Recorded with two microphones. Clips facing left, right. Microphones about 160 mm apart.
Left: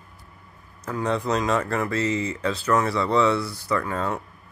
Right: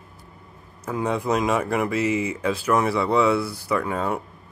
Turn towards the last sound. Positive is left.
turn(degrees=-10)  # may be behind; listen again after turning